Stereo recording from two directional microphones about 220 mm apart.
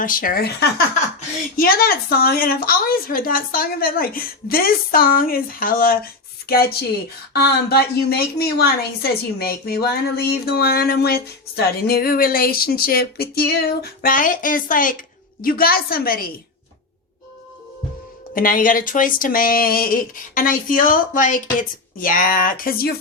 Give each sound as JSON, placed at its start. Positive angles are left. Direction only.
{"t": 0.0, "sound": "a woman's voice", "side_deg": 40}
{"t": 18.3, "sound": "a woman's voice", "side_deg": 40}